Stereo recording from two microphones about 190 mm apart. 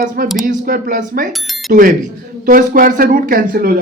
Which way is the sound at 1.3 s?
Centre (ahead or behind).